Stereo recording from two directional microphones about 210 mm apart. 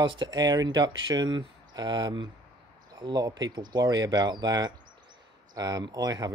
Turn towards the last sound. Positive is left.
turn(degrees=-20)  # may be behind; listen again after turning